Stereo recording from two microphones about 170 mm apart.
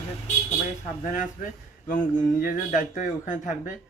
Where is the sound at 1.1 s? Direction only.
50° left (ahead or behind).